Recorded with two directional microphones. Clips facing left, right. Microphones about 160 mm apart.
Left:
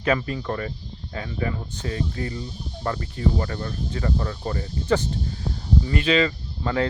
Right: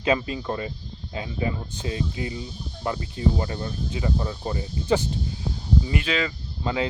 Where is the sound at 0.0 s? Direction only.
20° right (ahead or behind).